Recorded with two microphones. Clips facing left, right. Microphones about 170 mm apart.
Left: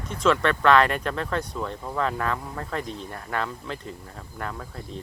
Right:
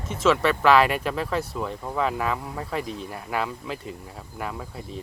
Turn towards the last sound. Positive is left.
turn(degrees=-10)  # may be behind; listen again after turning